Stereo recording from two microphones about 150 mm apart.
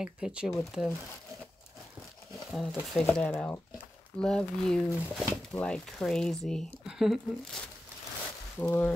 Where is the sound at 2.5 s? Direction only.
Centre (ahead or behind).